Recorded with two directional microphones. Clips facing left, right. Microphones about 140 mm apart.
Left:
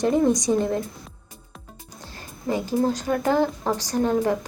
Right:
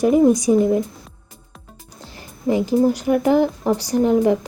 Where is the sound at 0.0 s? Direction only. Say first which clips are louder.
Right 6 dB; 10° right (ahead or behind).